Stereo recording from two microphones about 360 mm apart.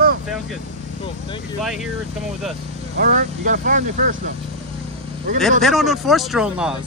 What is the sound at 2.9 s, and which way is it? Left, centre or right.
Speech, right.